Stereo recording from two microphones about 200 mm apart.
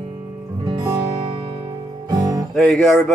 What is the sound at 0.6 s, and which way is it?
Music, 20° right (ahead or behind).